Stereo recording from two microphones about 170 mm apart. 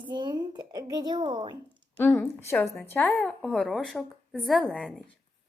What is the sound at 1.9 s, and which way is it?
Speech, 10° left (ahead or behind).